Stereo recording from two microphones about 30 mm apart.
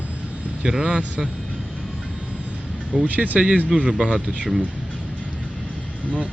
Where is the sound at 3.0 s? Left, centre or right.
Right.